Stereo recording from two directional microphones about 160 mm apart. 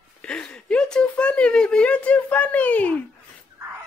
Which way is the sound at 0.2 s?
5° left (ahead or behind).